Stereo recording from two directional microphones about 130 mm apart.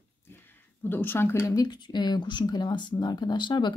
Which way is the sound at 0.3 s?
15° left (ahead or behind).